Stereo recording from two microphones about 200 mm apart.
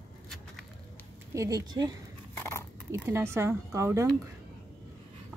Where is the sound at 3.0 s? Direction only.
15° right (ahead or behind).